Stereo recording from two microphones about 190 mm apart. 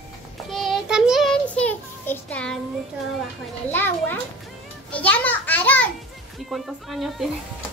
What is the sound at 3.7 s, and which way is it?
Speech, 10° left (ahead or behind).